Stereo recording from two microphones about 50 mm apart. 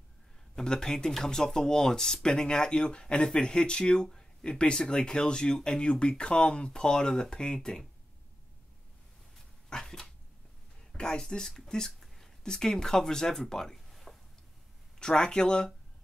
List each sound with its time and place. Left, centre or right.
0.6 s speech: centre
9.7 s dog: centre
11.0 s speech: centre
13.7 s a sound: centre
15.0 s speech: centre